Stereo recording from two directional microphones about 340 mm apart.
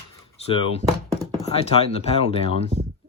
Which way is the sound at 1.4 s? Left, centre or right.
Centre.